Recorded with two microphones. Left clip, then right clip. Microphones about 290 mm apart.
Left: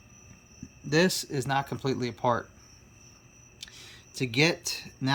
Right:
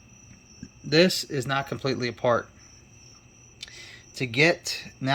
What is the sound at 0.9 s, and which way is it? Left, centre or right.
Speech, centre.